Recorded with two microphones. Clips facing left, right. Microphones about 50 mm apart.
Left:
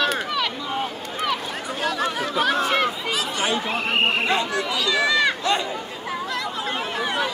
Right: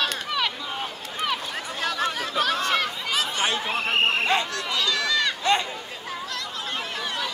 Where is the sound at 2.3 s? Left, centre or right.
Centre.